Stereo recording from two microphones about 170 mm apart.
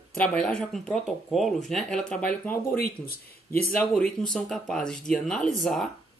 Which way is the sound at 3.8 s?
5° left (ahead or behind).